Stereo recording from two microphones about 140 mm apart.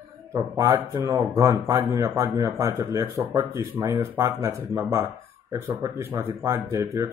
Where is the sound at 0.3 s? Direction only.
25° right (ahead or behind).